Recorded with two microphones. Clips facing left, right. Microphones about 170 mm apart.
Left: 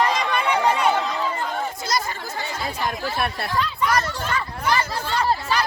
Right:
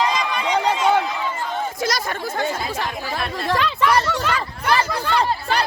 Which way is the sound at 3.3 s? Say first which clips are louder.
Right 4 dB; 90° right.